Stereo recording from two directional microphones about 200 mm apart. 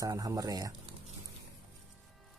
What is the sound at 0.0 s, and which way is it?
Speech, 20° right (ahead or behind).